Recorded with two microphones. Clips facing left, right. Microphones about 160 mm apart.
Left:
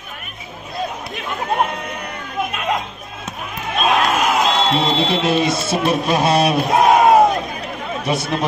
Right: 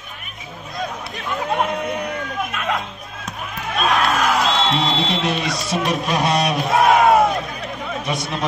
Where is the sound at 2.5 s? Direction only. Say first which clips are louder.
Left 3 dB; 20° left (ahead or behind).